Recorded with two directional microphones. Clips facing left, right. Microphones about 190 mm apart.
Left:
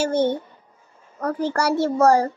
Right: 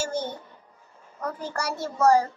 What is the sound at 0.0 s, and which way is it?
A child's voice, 60° left (ahead or behind).